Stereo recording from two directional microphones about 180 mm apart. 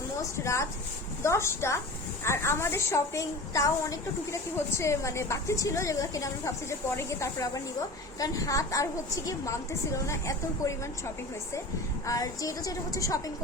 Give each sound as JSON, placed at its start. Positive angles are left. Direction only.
{"t": 0.3, "sound": "a woman's voice", "side_deg": 15}